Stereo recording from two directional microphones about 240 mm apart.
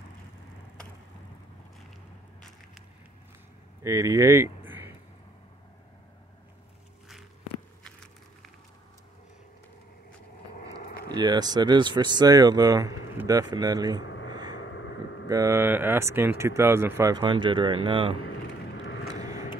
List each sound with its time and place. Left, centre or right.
3.8 s speech: centre
11.1 s speech: centre
14.0 s a sound: left
14.3 s vehicle: centre
15.2 s speech: centre